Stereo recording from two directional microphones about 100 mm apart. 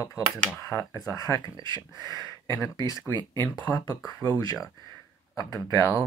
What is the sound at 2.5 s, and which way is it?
Speech, 35° left (ahead or behind).